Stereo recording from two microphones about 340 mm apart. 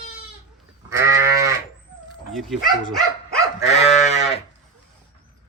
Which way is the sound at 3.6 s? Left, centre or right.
Centre.